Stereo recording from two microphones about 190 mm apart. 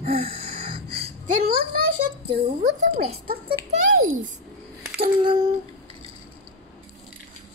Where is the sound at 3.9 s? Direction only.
90° right.